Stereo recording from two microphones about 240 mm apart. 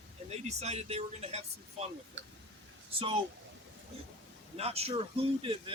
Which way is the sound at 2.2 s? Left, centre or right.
Right.